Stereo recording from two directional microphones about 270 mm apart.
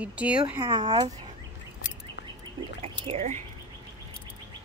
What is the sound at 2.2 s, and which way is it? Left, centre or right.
Duck, left.